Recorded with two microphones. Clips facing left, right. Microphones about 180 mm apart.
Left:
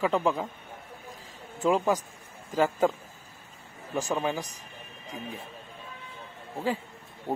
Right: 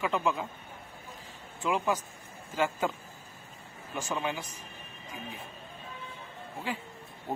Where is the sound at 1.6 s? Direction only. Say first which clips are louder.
Left 5 dB; 40° left (ahead or behind).